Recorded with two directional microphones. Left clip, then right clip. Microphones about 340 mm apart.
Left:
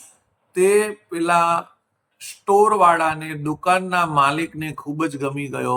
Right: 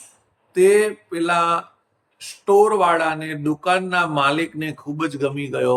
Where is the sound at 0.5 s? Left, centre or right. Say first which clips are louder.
Right 2 dB; centre.